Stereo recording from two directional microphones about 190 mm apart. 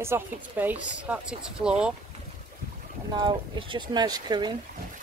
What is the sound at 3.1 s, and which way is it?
Speech, 25° right (ahead or behind).